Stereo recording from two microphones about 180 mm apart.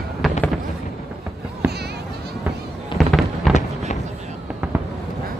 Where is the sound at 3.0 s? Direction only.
Centre (ahead or behind).